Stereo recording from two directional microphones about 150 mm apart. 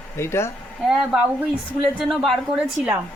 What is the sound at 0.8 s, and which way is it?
Speech, 5° right (ahead or behind).